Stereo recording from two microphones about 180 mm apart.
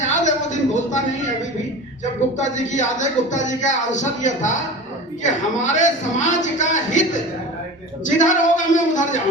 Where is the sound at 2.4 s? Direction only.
40° left (ahead or behind).